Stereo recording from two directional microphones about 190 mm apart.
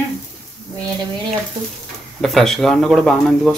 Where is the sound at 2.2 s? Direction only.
Centre (ahead or behind).